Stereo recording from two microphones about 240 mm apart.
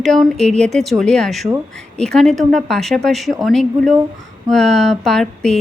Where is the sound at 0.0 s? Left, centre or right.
Centre.